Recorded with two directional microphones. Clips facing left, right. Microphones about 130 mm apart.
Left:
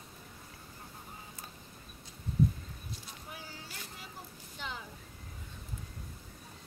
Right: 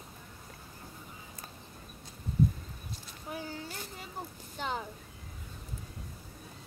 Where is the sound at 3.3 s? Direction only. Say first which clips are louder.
Right 10 dB; 45° right (ahead or behind).